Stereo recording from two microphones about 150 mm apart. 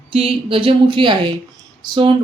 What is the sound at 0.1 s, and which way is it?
A woman's voice, 40° right (ahead or behind).